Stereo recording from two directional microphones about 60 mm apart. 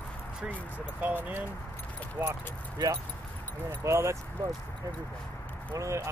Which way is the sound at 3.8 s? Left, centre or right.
Right.